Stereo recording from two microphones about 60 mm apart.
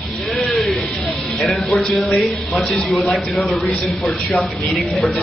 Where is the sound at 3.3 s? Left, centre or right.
Centre.